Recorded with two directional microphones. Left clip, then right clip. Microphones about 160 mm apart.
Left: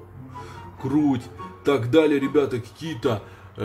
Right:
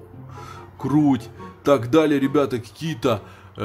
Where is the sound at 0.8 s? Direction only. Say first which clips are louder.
Right 3 dB; 45° right (ahead or behind).